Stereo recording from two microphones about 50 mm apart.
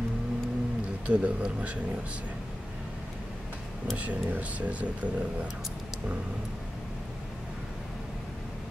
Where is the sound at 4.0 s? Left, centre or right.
Right.